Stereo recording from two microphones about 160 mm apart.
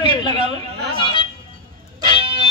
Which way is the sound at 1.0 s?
30° left (ahead or behind).